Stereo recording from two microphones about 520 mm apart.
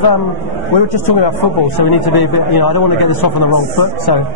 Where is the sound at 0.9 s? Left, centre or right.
Left.